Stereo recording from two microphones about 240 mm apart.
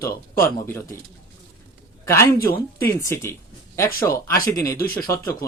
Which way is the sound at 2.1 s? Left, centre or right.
Centre.